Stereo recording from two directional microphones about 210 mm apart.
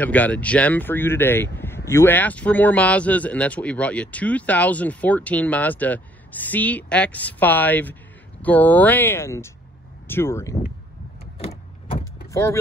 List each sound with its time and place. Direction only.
0.0 s speech: 5° left (ahead or behind)
11.3 s a sound: 25° left (ahead or behind)
12.3 s speech: 15° left (ahead or behind)